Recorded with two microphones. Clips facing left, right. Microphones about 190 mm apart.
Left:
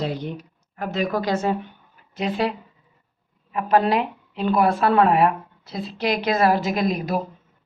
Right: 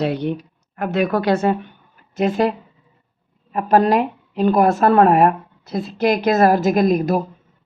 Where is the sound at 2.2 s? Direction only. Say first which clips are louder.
Right 6 dB; 45° right (ahead or behind).